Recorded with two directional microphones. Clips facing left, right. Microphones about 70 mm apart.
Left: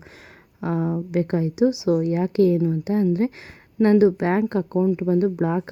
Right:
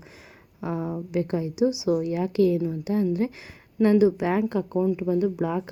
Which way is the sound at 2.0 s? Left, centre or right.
Left.